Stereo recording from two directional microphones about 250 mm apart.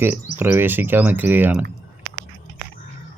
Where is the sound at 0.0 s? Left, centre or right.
Centre.